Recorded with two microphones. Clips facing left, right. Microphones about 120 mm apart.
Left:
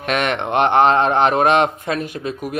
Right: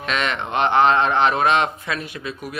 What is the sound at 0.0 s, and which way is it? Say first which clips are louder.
A man's voice: left 4 dB; 55° left (ahead or behind).